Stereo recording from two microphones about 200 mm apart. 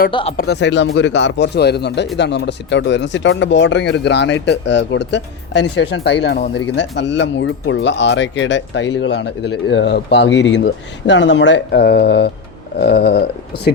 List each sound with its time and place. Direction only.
0.1 s speech: 25° left (ahead or behind)
0.3 s speech: 55° left (ahead or behind)
12.8 s a sound: 55° left (ahead or behind)